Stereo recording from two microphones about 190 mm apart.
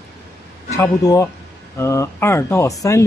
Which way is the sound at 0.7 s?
15° left (ahead or behind).